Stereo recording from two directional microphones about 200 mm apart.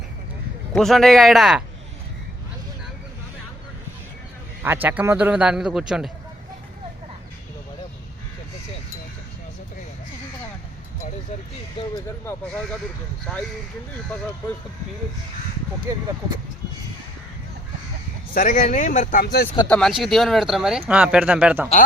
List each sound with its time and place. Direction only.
0.7 s speech: centre (ahead or behind)
4.6 s speech: 10° right (ahead or behind)
11.9 s speech: 15° left (ahead or behind)
15.9 s speech: 15° right (ahead or behind)
18.3 s speech: 40° left (ahead or behind)
19.6 s speech: 5° left (ahead or behind)